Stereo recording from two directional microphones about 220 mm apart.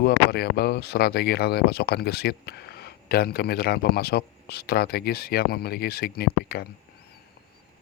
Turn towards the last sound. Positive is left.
turn(degrees=45)  # may be behind; listen again after turning